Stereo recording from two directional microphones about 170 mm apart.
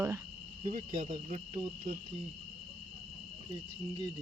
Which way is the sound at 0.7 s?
45° right (ahead or behind).